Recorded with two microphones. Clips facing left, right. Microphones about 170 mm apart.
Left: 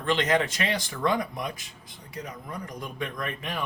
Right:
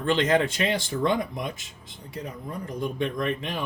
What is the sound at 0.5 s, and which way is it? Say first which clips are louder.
Speech: right 4 dB; 25° right (ahead or behind).